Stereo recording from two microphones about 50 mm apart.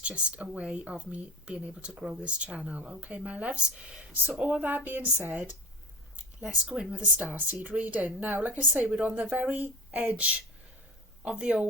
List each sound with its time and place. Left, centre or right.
0.0 s speech: right
4.4 s speech: right
6.1 s speech: right